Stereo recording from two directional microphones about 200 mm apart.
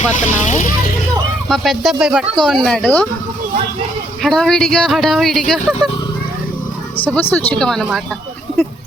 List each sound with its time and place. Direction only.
0.2 s speech: 40° left (ahead or behind)
1.5 s speech: centre (ahead or behind)
4.2 s speech: centre (ahead or behind)
6.9 s speech: 10° left (ahead or behind)